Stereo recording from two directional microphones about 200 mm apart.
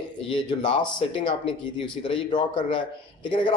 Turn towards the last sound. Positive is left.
turn(degrees=25)  # may be behind; listen again after turning